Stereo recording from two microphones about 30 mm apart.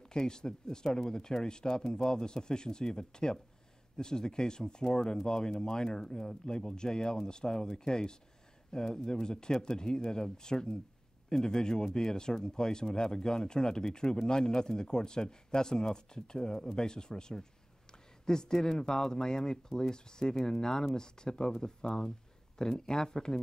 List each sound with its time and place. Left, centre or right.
0.1 s speech: left